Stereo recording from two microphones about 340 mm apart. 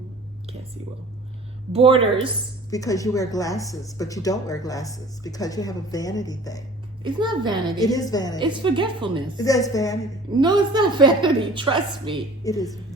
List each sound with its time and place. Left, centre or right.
1.7 s a woman's voice: centre
2.6 s speech: centre
7.0 s a woman's voice: centre
7.9 s speech: centre
8.4 s a woman's voice: centre
9.4 s speech: centre
10.4 s a woman's voice: centre
12.4 s speech: centre